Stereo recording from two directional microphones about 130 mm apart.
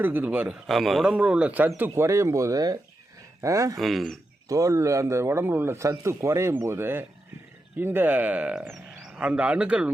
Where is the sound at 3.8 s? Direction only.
Centre (ahead or behind).